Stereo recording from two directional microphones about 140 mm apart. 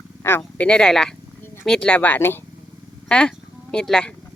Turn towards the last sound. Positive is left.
turn(degrees=5)  # may be behind; listen again after turning